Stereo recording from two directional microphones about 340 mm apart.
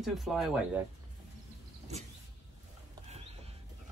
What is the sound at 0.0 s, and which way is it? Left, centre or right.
Speech, centre.